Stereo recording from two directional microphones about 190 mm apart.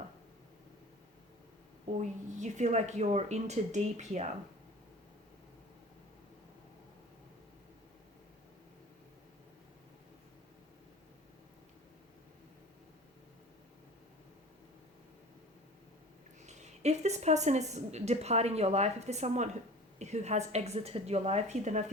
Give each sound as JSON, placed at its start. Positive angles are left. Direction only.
{"t": 2.0, "sound": "speech", "side_deg": -40}
{"t": 16.4, "sound": "a woman's voice", "side_deg": -35}